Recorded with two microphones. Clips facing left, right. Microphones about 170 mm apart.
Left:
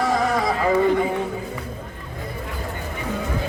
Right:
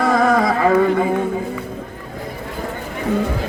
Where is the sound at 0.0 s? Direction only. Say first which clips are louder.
Right 5 dB; 60° right (ahead or behind).